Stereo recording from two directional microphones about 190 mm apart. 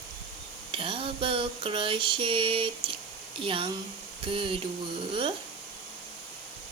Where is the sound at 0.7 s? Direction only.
30° right (ahead or behind).